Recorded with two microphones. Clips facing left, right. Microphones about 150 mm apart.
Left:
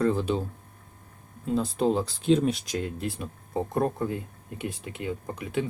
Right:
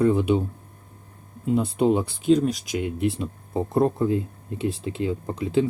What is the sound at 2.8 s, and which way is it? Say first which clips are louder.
Speech: right 7 dB; 20° right (ahead or behind).